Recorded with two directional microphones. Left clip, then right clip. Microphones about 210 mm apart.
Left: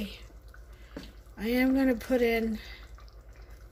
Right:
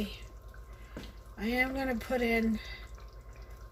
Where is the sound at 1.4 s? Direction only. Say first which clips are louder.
Left 4 dB; 50° left (ahead or behind).